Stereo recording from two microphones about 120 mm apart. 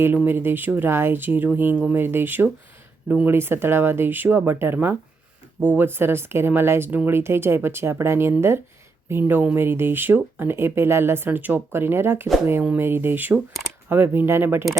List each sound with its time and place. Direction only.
0.3 s speech: 20° right (ahead or behind)